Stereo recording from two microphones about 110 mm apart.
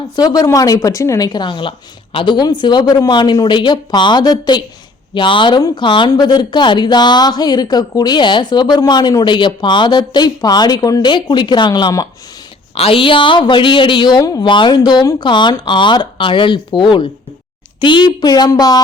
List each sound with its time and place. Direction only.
0.2 s a woman's voice: 35° left (ahead or behind)
6.1 s a woman's voice: 35° left (ahead or behind)
12.7 s a woman's voice: 60° left (ahead or behind); by 18.8 s 35° left (ahead or behind)